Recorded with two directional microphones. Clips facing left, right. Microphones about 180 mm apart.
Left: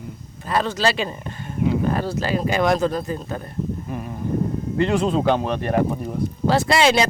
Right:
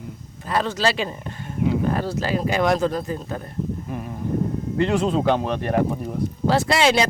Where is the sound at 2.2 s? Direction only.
Centre (ahead or behind).